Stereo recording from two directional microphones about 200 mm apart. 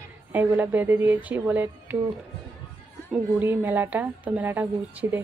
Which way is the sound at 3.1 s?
10° right (ahead or behind).